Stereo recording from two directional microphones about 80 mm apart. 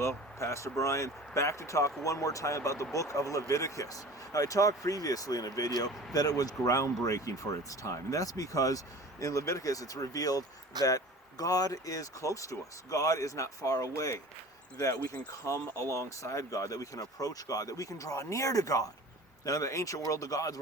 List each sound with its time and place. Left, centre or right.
0.3 s speech: left